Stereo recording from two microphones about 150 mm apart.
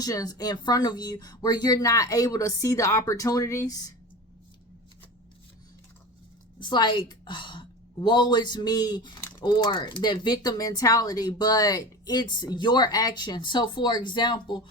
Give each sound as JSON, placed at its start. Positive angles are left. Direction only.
{"t": 0.0, "sound": "speech", "side_deg": 25}
{"t": 6.6, "sound": "a woman's voice", "side_deg": 30}